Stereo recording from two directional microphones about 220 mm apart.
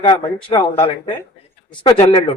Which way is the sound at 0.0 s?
20° left (ahead or behind).